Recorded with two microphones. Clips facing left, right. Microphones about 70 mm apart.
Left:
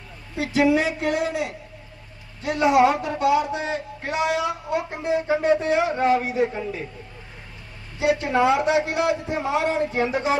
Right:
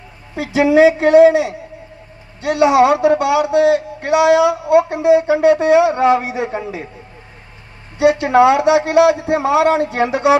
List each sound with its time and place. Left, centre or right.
0.3 s speech: right
7.9 s a man's voice: right